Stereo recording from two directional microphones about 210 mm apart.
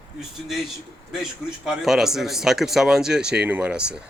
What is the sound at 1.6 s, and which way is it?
Speech, centre (ahead or behind).